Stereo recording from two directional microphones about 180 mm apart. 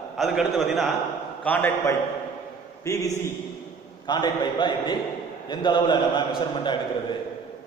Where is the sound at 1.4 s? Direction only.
10° left (ahead or behind).